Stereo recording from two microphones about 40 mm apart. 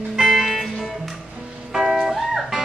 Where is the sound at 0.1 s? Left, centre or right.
Centre.